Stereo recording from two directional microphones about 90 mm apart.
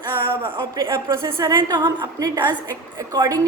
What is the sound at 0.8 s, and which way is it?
Speech, 30° right (ahead or behind).